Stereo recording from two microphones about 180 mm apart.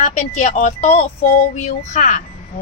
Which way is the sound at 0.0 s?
40° left (ahead or behind).